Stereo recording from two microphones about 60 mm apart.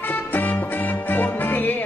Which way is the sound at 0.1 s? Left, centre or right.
Left.